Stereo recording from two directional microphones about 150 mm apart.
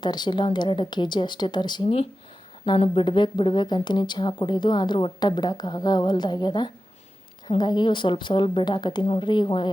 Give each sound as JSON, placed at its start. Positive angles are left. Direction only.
{"t": 0.0, "sound": "a woman's voice", "side_deg": 30}